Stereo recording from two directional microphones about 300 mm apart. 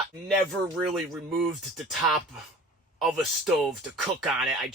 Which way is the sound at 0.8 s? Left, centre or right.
Centre.